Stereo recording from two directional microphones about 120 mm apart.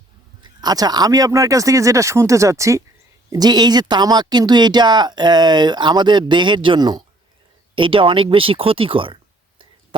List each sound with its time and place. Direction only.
0.4 s speech: 35° right (ahead or behind)
7.8 s speech: 45° right (ahead or behind)